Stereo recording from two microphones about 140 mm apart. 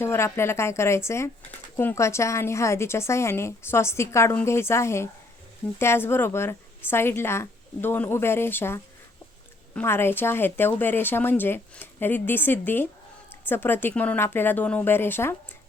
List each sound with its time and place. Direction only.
0.0 s a woman's voice: 20° left (ahead or behind)